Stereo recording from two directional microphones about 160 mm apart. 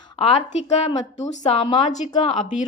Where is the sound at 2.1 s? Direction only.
30° left (ahead or behind).